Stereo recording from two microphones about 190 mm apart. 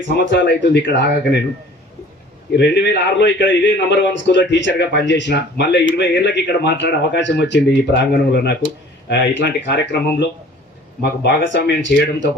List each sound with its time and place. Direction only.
0.2 s a man's voice: 70° left (ahead or behind)
2.6 s a man's voice: 65° left (ahead or behind)